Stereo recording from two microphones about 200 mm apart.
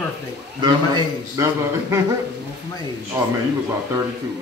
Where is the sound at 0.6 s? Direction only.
20° right (ahead or behind).